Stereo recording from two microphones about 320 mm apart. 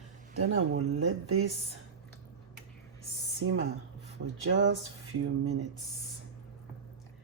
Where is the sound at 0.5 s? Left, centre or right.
Right.